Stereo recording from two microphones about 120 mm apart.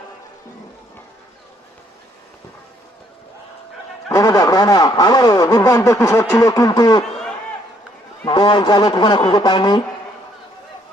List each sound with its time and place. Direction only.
4.1 s speech: 30° left (ahead or behind)
8.3 s a man's voice: 40° left (ahead or behind)